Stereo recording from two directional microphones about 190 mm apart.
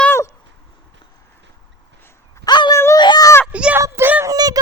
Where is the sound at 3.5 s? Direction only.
5° right (ahead or behind).